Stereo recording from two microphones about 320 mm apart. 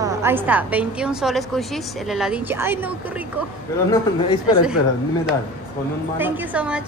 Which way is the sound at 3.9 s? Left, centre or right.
Centre.